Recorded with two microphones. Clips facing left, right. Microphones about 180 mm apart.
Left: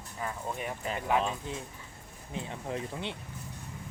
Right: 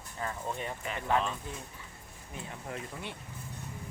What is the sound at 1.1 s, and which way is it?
Speech, 10° left (ahead or behind).